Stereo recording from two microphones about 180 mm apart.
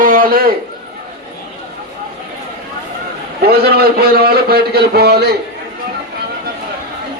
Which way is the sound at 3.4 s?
60° right (ahead or behind).